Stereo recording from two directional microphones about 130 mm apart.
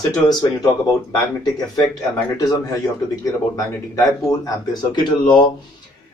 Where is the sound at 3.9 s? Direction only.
25° left (ahead or behind).